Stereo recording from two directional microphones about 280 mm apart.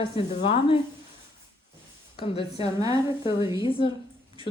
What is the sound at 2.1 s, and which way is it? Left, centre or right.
A woman's voice, centre.